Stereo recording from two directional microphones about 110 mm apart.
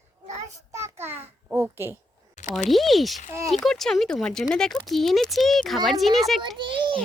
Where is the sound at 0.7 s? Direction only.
25° right (ahead or behind).